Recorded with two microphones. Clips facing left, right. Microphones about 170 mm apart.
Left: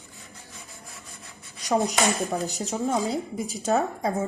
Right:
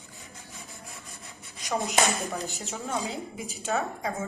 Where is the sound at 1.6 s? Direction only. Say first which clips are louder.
Left 4 dB; 35° left (ahead or behind).